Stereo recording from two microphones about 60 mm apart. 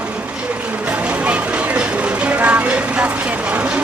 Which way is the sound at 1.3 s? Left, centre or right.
Right.